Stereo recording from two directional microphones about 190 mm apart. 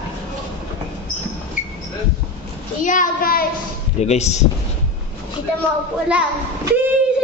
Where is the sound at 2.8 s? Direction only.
45° left (ahead or behind).